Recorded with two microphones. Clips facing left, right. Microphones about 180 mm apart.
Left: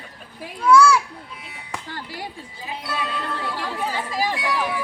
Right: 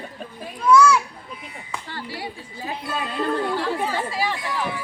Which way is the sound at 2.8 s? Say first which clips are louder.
Left 1 dB; 85° left.